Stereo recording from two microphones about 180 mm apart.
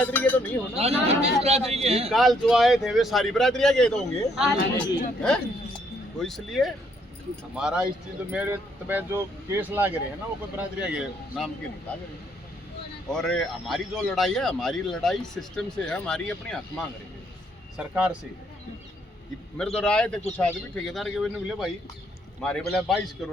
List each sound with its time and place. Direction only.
0.0 s speech: 10° left (ahead or behind)
0.8 s a man's voice: 35° right (ahead or behind)
2.0 s a man's voice: centre (ahead or behind)
13.1 s a man's voice: 5° left (ahead or behind)
17.7 s speech: 5° right (ahead or behind)
19.5 s a man's voice: 5° left (ahead or behind)